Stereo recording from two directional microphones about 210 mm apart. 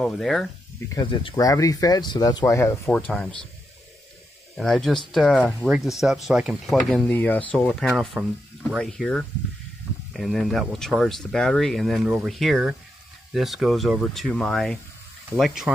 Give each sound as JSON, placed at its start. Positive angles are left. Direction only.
{"t": 0.0, "sound": "speech", "side_deg": 0}
{"t": 0.9, "sound": "speech", "side_deg": 20}
{"t": 4.6, "sound": "speech", "side_deg": 0}